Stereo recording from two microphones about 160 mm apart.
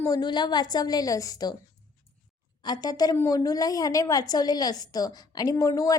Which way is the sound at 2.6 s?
25° left (ahead or behind).